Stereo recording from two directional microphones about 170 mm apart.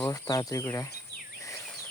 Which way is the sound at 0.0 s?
20° left (ahead or behind).